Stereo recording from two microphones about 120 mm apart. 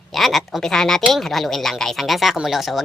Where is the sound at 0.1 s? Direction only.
Centre (ahead or behind).